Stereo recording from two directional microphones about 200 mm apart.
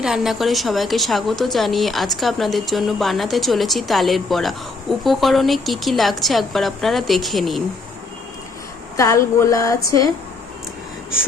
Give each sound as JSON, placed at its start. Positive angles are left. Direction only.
{"t": 0.0, "sound": "a woman's voice", "side_deg": 0}
{"t": 9.0, "sound": "speech", "side_deg": 15}